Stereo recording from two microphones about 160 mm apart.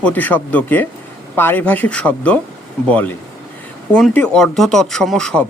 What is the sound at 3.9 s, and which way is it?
Speech, 5° left (ahead or behind).